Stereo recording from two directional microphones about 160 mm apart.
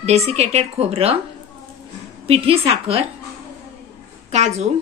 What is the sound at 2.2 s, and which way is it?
Speech, 35° right (ahead or behind).